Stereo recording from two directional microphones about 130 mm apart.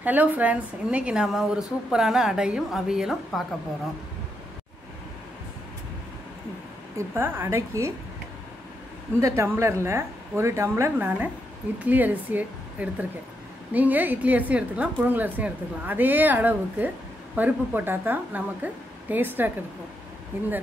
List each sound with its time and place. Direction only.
0.0 s a woman's voice: 15° right (ahead or behind)
7.0 s speech: 15° right (ahead or behind)
9.2 s a woman's voice: 20° right (ahead or behind)